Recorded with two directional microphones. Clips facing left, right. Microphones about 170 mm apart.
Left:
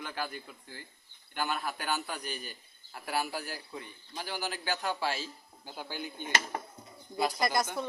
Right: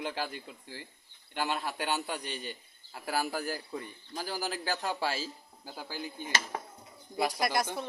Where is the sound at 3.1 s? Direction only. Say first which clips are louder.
Right 2 dB; 40° right (ahead or behind).